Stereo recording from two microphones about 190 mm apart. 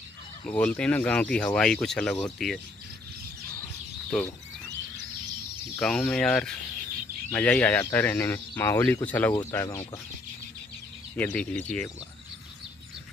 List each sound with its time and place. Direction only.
0.5 s speech: 10° left (ahead or behind)
5.8 s speech: 5° left (ahead or behind)
11.1 s speech: 5° left (ahead or behind)